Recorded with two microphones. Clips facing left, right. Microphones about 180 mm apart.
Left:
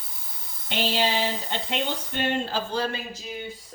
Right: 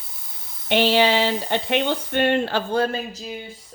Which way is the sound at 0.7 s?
70° right (ahead or behind).